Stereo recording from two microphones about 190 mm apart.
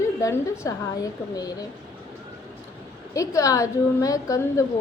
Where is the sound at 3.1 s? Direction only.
15° left (ahead or behind).